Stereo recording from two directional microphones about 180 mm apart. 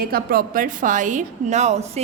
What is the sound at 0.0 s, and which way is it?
A woman's voice, 55° right (ahead or behind).